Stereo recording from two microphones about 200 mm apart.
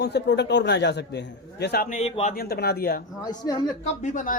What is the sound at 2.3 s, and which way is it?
Speech, 50° left (ahead or behind).